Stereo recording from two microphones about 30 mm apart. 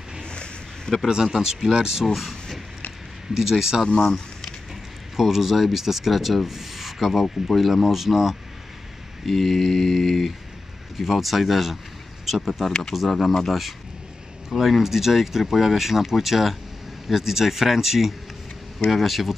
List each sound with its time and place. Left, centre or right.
0.2 s a sound: left
1.0 s speech: right
3.3 s speech: centre
4.0 s a sound: centre
5.1 s speech: centre
9.2 s mantra: centre
11.0 s mantra: centre
14.6 s speech: centre
18.9 s mantra: centre